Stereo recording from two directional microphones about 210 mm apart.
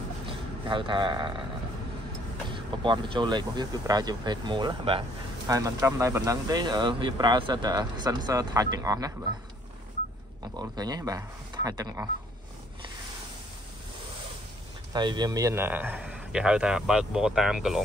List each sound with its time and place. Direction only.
0.3 s a man's voice: 25° right (ahead or behind)
2.5 s speech: 20° right (ahead or behind)
10.5 s speech: 20° right (ahead or behind)
14.9 s a man's voice: 20° right (ahead or behind); by 17.8 s centre (ahead or behind)